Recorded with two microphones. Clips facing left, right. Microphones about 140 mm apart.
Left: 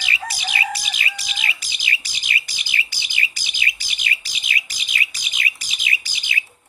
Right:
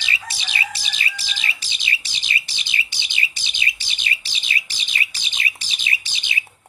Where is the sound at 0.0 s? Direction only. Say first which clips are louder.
Left 3 dB; 25° right (ahead or behind).